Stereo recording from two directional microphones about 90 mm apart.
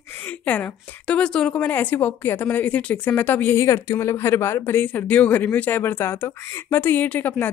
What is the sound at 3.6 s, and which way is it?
Speech, 30° left (ahead or behind).